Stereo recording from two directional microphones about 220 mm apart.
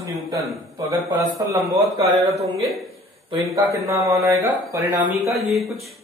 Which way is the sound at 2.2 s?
30° right (ahead or behind).